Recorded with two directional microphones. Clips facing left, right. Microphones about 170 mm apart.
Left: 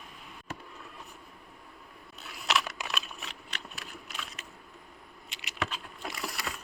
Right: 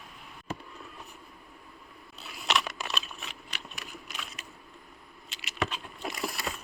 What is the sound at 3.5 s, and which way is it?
Biting, 10° right (ahead or behind).